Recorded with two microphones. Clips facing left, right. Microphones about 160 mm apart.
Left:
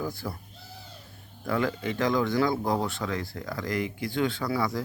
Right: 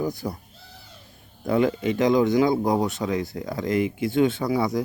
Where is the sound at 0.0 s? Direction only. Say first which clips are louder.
Right 6 dB; 20° right (ahead or behind).